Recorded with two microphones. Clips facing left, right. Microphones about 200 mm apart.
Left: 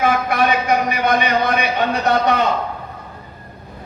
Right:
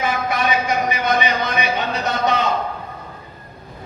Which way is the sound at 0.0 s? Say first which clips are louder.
Left 4 dB; 60° left (ahead or behind).